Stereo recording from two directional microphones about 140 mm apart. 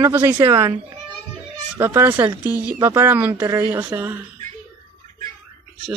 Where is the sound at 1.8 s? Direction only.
15° right (ahead or behind).